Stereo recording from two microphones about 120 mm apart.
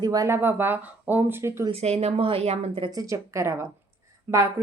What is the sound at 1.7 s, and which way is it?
A woman's voice, 60° right (ahead or behind).